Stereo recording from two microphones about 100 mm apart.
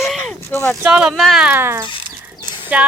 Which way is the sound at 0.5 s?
20° left (ahead or behind).